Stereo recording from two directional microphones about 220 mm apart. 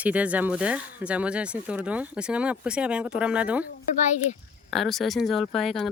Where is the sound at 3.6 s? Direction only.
35° left (ahead or behind).